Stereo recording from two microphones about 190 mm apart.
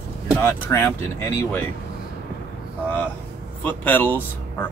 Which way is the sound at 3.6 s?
10° left (ahead or behind).